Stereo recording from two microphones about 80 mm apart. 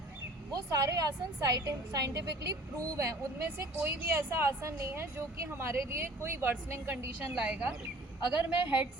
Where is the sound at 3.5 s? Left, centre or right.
Right.